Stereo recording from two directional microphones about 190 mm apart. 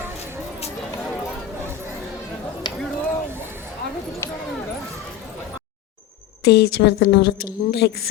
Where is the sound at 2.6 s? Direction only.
25° left (ahead or behind).